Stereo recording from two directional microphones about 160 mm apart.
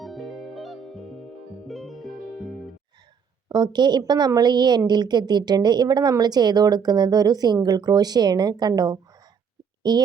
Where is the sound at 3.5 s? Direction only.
25° right (ahead or behind).